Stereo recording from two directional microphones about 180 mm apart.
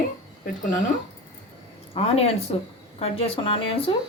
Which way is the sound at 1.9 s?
35° left (ahead or behind).